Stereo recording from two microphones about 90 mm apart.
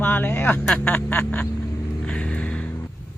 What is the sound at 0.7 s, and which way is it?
Duck, 15° left (ahead or behind).